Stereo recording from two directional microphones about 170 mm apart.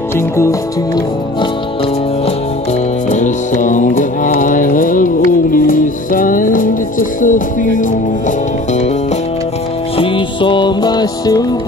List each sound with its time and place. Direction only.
0.4 s music: 20° left (ahead or behind)
3.1 s music: 45° left (ahead or behind)
9.9 s music: 30° left (ahead or behind)